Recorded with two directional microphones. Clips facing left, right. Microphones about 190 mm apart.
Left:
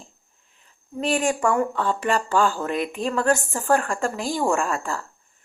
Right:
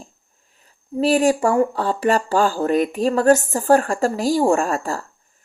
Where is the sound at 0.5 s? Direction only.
40° right (ahead or behind).